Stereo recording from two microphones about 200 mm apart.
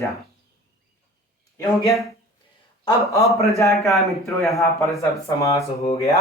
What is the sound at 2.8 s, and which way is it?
Speech, 15° left (ahead or behind).